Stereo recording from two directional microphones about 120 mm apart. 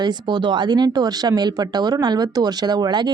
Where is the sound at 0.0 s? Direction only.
35° right (ahead or behind).